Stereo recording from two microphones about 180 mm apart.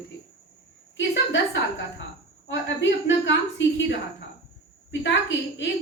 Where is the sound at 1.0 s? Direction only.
90° left.